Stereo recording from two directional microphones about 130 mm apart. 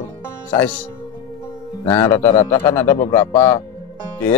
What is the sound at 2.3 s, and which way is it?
Speech, 50° left (ahead or behind).